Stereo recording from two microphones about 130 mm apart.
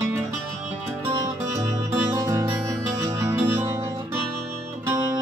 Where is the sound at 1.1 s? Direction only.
30° right (ahead or behind).